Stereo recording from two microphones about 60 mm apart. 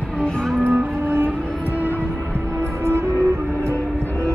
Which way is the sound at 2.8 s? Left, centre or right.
Right.